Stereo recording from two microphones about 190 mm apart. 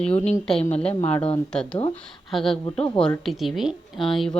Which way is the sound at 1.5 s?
5° left (ahead or behind).